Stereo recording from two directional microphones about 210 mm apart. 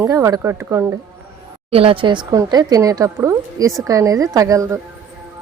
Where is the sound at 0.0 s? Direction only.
15° right (ahead or behind).